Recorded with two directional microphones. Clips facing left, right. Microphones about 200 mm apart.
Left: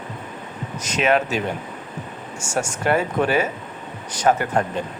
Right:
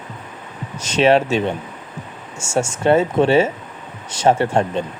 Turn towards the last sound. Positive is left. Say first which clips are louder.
# right 4 dB
turn(degrees=-30)  # may be behind; listen again after turning